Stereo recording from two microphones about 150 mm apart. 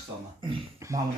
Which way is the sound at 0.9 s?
20° right (ahead or behind).